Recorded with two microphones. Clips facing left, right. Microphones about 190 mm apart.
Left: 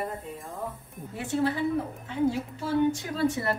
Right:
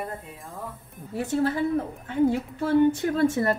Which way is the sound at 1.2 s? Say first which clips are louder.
Right 2 dB; 45° right (ahead or behind).